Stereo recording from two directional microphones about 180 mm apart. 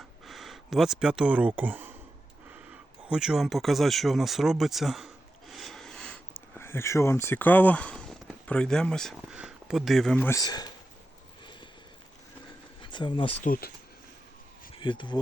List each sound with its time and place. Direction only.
0.3 s speech: centre (ahead or behind)
3.1 s speech: 5° right (ahead or behind); by 10.7 s 20° left (ahead or behind)
12.8 s speech: 25° left (ahead or behind)
13.4 s speech: 50° left (ahead or behind)
14.8 s speech: 25° left (ahead or behind)